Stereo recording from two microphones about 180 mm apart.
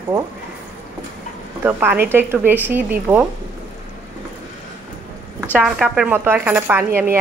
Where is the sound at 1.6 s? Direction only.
10° right (ahead or behind).